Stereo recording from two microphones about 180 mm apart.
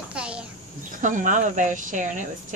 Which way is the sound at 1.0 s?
45° right (ahead or behind).